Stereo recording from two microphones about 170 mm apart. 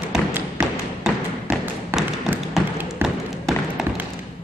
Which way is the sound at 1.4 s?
10° right (ahead or behind).